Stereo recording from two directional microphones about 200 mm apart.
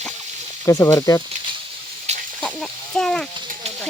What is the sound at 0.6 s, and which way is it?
Speech, 15° left (ahead or behind).